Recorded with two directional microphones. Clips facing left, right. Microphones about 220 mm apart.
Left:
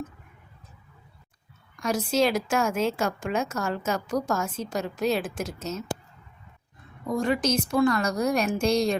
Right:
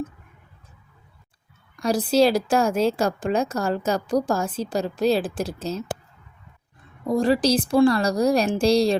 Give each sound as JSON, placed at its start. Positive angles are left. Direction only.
{"t": 1.7, "sound": "a woman's voice", "side_deg": -35}
{"t": 7.1, "sound": "a woman's voice", "side_deg": -35}